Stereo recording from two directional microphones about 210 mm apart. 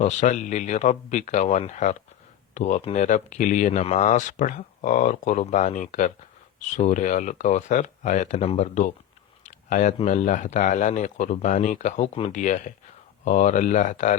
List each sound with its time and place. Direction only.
0.0 s speech: 35° left (ahead or behind)